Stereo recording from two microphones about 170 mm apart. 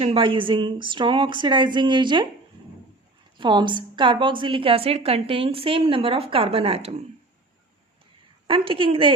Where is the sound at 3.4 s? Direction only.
25° right (ahead or behind).